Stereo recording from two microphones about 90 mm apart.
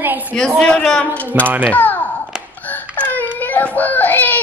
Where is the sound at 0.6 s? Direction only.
10° left (ahead or behind).